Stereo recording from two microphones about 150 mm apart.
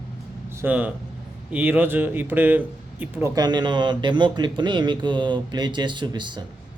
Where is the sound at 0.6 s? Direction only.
10° right (ahead or behind).